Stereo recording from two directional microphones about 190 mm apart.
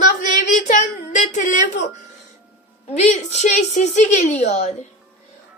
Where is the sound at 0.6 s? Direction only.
40° left (ahead or behind).